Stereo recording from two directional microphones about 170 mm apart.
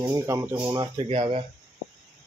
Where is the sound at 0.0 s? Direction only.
15° right (ahead or behind).